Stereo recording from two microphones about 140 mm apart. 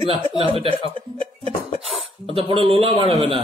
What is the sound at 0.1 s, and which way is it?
Speech, 35° left (ahead or behind).